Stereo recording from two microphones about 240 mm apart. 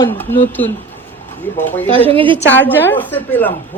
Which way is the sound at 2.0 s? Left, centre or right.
Right.